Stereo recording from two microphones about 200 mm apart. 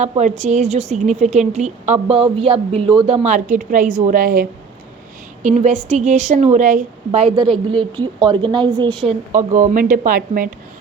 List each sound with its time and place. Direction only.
0.0 s a woman's voice: 35° right (ahead or behind)
3.2 s a woman's voice: 40° right (ahead or behind)
7.4 s a woman's voice: centre (ahead or behind)
7.8 s a woman's voice: 25° right (ahead or behind)
9.0 s a woman's voice: 35° right (ahead or behind)